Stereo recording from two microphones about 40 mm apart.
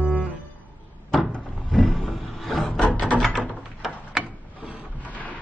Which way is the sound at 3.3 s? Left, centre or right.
Centre.